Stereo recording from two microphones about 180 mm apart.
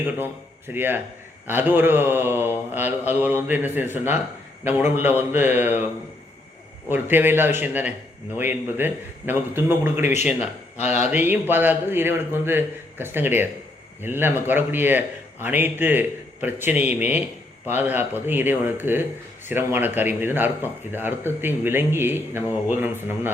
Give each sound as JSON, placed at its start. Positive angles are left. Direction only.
{"t": 0.7, "sound": "speech", "side_deg": -10}
{"t": 6.9, "sound": "speech", "side_deg": -10}
{"t": 10.8, "sound": "speech", "side_deg": 40}
{"t": 11.1, "sound": "speech", "side_deg": -10}